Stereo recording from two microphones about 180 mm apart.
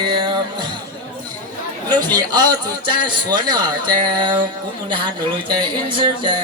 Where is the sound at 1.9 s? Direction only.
20° right (ahead or behind).